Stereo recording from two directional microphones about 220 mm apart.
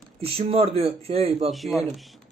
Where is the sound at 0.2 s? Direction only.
25° right (ahead or behind).